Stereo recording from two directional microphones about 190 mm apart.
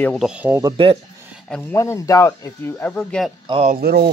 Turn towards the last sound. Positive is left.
turn(degrees=-55)  # may be behind; listen again after turning